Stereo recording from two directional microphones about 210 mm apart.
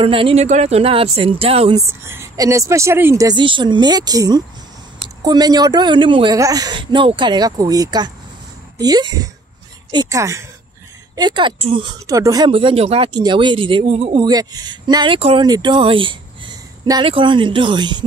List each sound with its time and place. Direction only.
0.0 s speech: 25° right (ahead or behind)
2.0 s a woman's voice: 15° right (ahead or behind)